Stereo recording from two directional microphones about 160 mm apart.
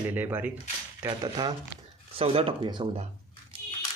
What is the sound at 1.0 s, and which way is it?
Speech, 25° right (ahead or behind).